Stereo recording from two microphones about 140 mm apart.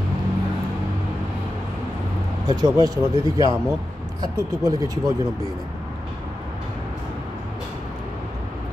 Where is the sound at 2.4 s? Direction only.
30° right (ahead or behind).